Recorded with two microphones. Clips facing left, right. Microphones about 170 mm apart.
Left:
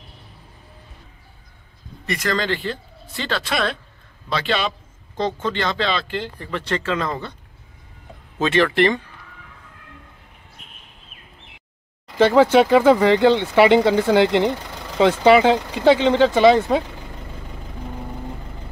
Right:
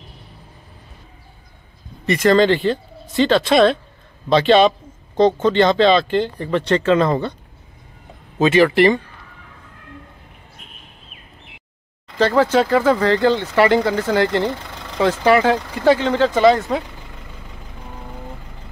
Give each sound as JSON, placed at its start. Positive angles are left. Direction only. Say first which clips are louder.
{"t": 2.0, "sound": "a man's voice", "louder": "right 9 dB", "side_deg": -20}
{"t": 8.4, "sound": "speech", "louder": "right 4 dB", "side_deg": -10}
{"t": 12.2, "sound": "speech", "louder": "left 2 dB", "side_deg": 15}